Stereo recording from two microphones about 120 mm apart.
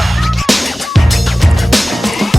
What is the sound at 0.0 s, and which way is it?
Music, centre (ahead or behind).